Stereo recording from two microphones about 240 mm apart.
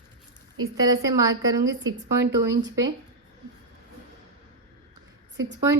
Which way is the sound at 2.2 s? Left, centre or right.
Right.